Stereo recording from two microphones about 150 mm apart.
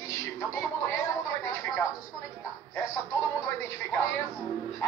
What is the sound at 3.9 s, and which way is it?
Speech, 15° left (ahead or behind).